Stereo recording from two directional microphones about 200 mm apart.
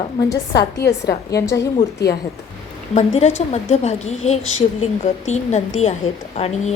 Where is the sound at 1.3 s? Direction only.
15° left (ahead or behind).